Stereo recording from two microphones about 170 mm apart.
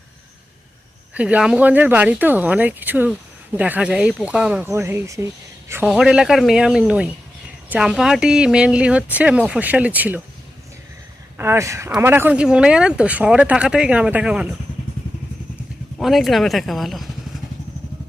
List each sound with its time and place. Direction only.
1.1 s speech: 10° right (ahead or behind)
5.9 s speech: 5° right (ahead or behind)
11.3 s speech: 15° right (ahead or behind)
16.0 s speech: centre (ahead or behind)